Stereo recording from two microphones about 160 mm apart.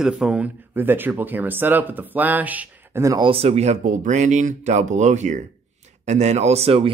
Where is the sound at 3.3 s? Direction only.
40° right (ahead or behind).